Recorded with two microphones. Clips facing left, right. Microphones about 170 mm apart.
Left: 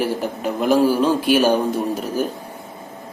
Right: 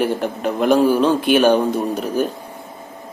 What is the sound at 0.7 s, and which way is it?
Speech, 10° left (ahead or behind).